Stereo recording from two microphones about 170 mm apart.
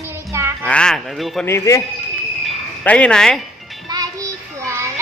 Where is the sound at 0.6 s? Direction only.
5° left (ahead or behind).